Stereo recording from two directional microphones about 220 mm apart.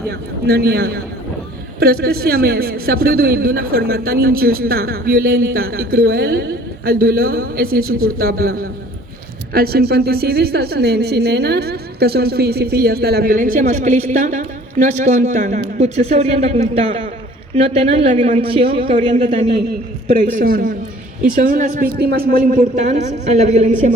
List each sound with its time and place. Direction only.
0.1 s a woman's voice: 45° right (ahead or behind); by 19.5 s 25° right (ahead or behind)
20.3 s a man's voice: 40° right (ahead or behind)